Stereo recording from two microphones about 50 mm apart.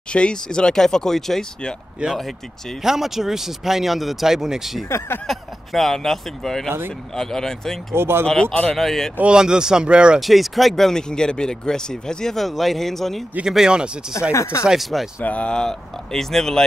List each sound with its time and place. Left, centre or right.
0.1 s speech: centre
2.0 s speech: centre
4.8 s speech: left
5.2 s speech: centre
7.9 s speech: right
8.3 s speech: centre
9.2 s speech: centre
10.2 s speech: centre
13.5 s speech: centre
14.3 s speech: left
14.7 s speech: centre
15.2 s speech: left
15.5 s speech: centre